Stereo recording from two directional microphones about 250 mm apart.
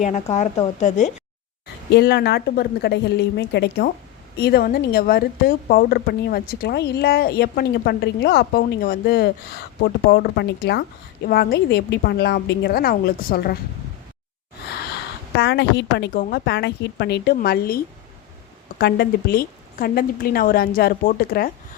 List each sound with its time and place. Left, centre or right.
0.0 s a woman's voice: left
1.9 s speech: left
15.4 s speech: left